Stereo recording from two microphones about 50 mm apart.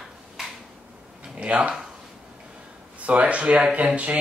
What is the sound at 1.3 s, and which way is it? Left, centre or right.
Speech, right.